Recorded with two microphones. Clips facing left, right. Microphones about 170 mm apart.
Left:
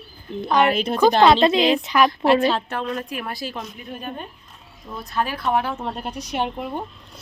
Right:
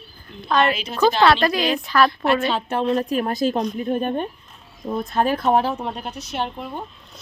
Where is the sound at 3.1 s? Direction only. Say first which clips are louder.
Right 9 dB; 45° right (ahead or behind).